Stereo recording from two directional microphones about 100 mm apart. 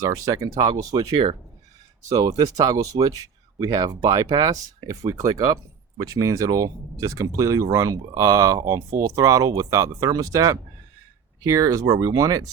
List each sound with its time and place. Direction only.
0.0 s speech: 35° right (ahead or behind)
1.1 s speech: 70° right (ahead or behind)
2.0 s speech: 40° right (ahead or behind)